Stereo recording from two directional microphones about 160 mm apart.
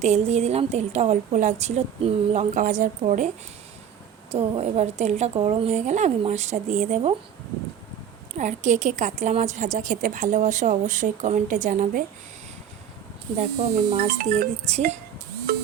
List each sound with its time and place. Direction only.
0.0 s a woman's voice: 45° right (ahead or behind)
8.4 s a woman's voice: 50° right (ahead or behind)
13.4 s a woman's voice: 45° right (ahead or behind)